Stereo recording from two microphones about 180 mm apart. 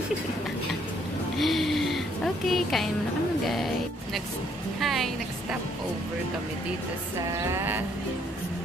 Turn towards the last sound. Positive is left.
turn(degrees=-10)  # may be behind; listen again after turning